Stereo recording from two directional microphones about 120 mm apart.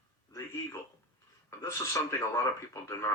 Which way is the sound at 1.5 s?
25° left (ahead or behind).